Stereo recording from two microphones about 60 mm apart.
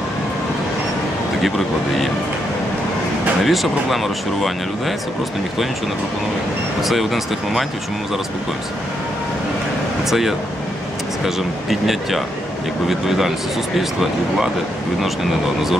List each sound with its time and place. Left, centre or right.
3.4 s speech: centre
6.8 s speech: centre
10.0 s speech: centre